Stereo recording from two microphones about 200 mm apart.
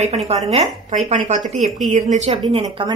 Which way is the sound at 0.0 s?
30° right (ahead or behind).